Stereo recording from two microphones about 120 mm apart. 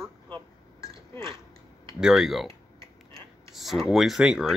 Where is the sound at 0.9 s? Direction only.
45° right (ahead or behind).